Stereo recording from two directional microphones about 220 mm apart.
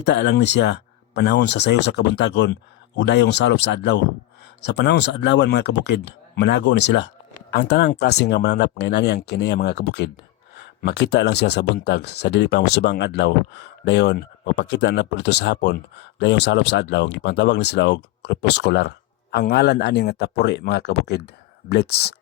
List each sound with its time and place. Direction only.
0.0 s speech: 50° left (ahead or behind)